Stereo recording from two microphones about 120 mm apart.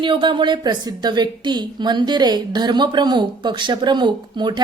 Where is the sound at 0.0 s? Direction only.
40° right (ahead or behind).